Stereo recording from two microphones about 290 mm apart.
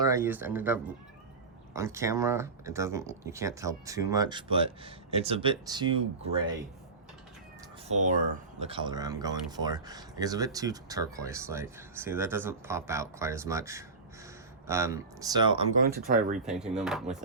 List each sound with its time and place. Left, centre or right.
0.0 s speech: centre
7.9 s speech: right
16.0 s speech: right
16.5 s speech: centre